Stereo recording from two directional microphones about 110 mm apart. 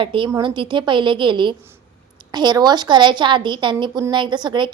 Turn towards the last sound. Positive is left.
turn(degrees=-45)  # may be behind; listen again after turning